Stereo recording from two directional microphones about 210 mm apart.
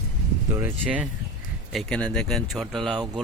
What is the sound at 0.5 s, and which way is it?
Speech, 10° right (ahead or behind).